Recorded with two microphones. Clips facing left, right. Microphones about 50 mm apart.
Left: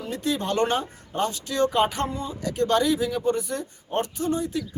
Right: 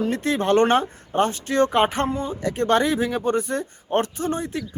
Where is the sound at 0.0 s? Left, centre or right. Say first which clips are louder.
Right 5 dB; right.